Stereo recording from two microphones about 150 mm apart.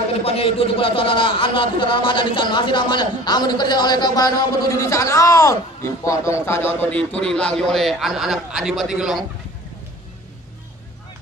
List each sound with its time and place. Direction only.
0.1 s a man's voice: 40° left (ahead or behind); by 9.2 s 5° right (ahead or behind)